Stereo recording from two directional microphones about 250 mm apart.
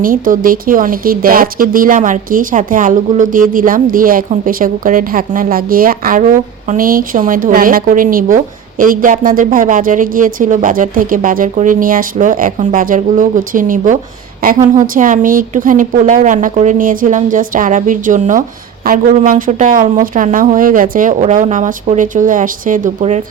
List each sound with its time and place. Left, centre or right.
0.0 s speech: right